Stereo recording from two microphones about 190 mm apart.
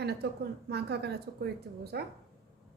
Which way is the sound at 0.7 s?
60° right (ahead or behind).